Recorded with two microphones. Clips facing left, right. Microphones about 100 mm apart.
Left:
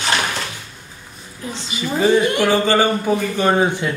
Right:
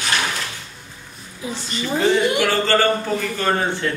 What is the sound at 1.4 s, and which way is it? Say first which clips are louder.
Speech: right 1 dB; 10° right (ahead or behind).